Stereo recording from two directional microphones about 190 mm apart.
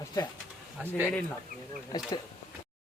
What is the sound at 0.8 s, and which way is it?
Speech, 10° right (ahead or behind).